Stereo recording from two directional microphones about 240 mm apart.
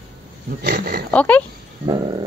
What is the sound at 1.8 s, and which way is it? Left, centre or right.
Dog, centre.